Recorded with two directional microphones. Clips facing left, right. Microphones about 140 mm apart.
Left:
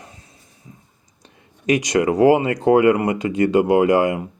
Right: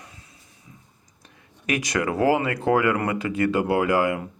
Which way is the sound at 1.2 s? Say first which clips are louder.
Left 8 dB; 25° left (ahead or behind).